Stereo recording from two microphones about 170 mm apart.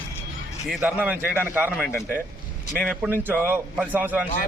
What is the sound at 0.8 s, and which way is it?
A man's voice, 10° right (ahead or behind).